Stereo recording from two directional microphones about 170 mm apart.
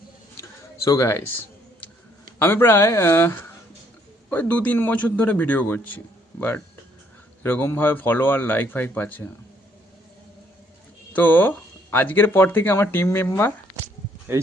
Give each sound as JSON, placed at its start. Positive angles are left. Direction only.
{"t": 0.9, "sound": "speech", "side_deg": 15}
{"t": 2.4, "sound": "speech", "side_deg": 15}
{"t": 7.4, "sound": "speech", "side_deg": 10}
{"t": 11.1, "sound": "speech", "side_deg": 10}
{"t": 14.3, "sound": "speech", "side_deg": -15}